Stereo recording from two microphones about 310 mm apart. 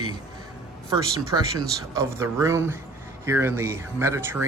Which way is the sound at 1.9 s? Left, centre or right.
Centre.